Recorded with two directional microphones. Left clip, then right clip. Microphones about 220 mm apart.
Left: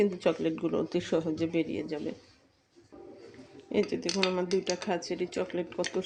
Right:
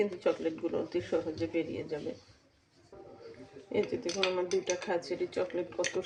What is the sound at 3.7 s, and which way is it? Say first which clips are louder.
Speech: left 3 dB; 50° left (ahead or behind).